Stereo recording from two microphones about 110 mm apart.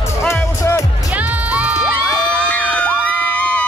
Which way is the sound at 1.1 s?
15° right (ahead or behind).